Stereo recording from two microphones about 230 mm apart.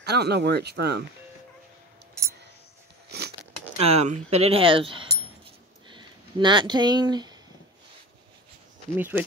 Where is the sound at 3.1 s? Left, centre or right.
Right.